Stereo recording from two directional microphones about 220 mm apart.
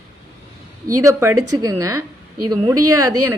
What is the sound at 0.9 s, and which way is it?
A woman's voice, 15° right (ahead or behind).